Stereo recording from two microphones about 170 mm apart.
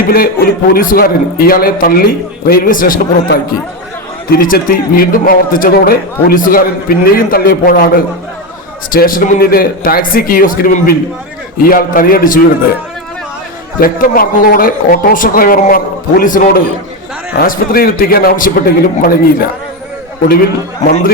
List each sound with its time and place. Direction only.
0.0 s a man's voice: 60° left (ahead or behind)
13.7 s a man's voice: 60° left (ahead or behind)